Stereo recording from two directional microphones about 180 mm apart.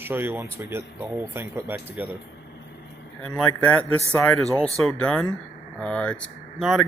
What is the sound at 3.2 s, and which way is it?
Speech, 5° left (ahead or behind).